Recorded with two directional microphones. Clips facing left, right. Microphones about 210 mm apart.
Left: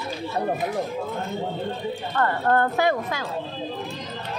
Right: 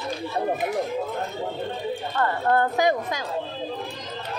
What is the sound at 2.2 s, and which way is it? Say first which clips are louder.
Speech: left 1 dB; 10° right (ahead or behind).